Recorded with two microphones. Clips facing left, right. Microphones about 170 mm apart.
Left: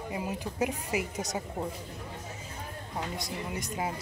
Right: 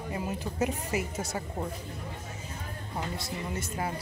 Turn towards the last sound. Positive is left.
turn(degrees=15)  # may be behind; listen again after turning